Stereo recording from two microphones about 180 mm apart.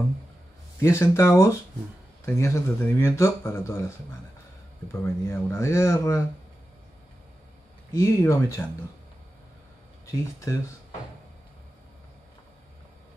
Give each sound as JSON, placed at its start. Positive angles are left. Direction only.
{"t": 0.7, "sound": "speech", "side_deg": 15}
{"t": 5.0, "sound": "speech", "side_deg": 15}
{"t": 7.9, "sound": "speech", "side_deg": 15}